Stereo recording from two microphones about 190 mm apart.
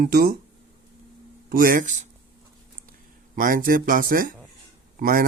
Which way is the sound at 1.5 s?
50° right (ahead or behind).